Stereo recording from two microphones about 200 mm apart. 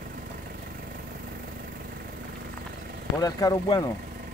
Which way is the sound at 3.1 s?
20° left (ahead or behind).